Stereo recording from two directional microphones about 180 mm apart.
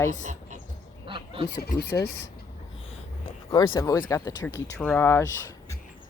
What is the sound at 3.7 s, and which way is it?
Speech, 20° left (ahead or behind).